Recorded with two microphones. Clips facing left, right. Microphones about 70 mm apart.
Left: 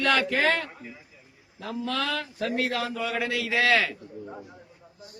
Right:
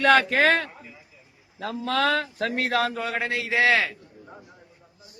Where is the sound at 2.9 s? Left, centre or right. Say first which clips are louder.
Right 1 dB; right.